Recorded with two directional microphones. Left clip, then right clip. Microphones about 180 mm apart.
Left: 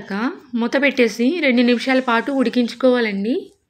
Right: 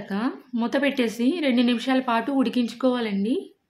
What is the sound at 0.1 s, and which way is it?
A woman's voice, 5° left (ahead or behind).